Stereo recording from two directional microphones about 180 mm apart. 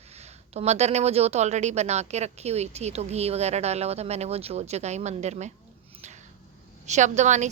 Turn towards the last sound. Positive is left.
turn(degrees=-40)  # may be behind; listen again after turning